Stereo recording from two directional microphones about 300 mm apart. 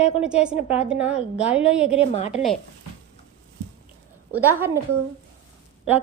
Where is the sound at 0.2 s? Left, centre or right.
Centre.